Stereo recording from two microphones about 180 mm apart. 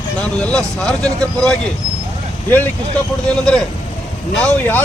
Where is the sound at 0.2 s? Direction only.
5° left (ahead or behind).